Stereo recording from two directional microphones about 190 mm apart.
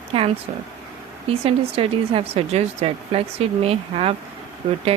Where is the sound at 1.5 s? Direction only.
30° right (ahead or behind).